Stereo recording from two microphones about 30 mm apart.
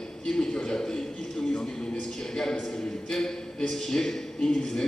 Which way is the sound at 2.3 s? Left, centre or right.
Centre.